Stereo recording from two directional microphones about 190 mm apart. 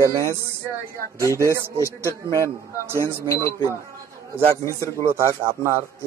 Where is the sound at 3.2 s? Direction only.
15° left (ahead or behind).